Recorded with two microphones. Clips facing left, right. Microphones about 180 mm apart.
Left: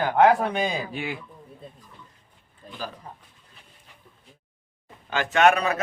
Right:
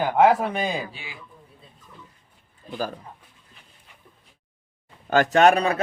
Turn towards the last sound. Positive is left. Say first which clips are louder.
# right 2 dB
turn(degrees=-30)  # may be behind; listen again after turning